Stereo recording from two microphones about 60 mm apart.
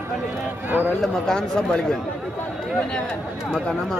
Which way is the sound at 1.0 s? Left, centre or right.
Centre.